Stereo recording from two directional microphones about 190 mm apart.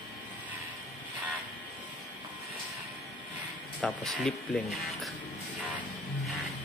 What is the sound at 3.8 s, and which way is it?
Speech, centre (ahead or behind).